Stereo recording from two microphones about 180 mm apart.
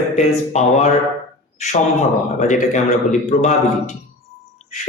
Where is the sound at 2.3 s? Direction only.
45° left (ahead or behind).